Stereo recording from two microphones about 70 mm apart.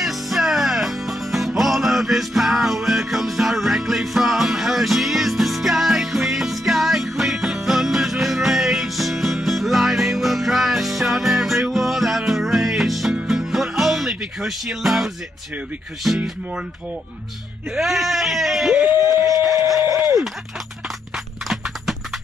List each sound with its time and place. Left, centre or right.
0.0 s music: centre
16.0 s speech: centre
17.7 s speech: centre
19.4 s a sound: right
19.9 s speech: right
21.5 s clip-clop: centre